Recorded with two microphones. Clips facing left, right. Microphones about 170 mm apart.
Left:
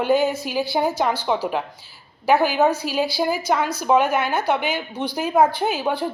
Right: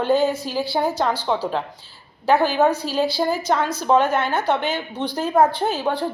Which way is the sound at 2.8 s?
10° left (ahead or behind).